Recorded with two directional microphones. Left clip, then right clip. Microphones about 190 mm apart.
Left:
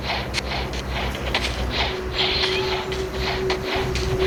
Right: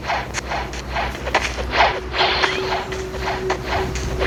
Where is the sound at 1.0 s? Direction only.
30° right (ahead or behind).